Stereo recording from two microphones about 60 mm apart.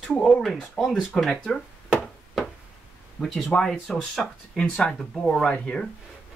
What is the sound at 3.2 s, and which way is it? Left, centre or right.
Speech, centre.